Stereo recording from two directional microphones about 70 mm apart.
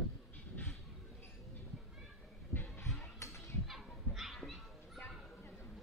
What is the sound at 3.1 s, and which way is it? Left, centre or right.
Children playing, left.